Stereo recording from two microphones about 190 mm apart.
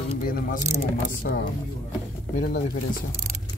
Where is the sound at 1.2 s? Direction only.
50° left (ahead or behind).